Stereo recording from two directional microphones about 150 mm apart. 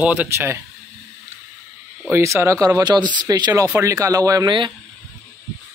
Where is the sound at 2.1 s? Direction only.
20° right (ahead or behind).